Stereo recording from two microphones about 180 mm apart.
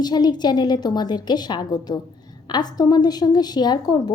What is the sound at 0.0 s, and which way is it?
A woman's voice, 25° left (ahead or behind).